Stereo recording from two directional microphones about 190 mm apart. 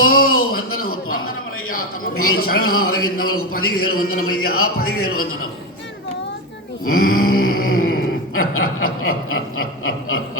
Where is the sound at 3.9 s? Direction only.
50° left (ahead or behind).